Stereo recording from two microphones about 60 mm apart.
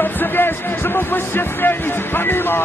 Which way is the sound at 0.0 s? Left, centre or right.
Left.